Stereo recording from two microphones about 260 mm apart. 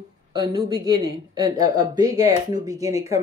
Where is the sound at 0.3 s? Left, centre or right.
Centre.